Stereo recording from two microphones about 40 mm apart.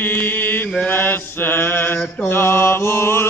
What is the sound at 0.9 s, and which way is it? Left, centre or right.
Mantra, left.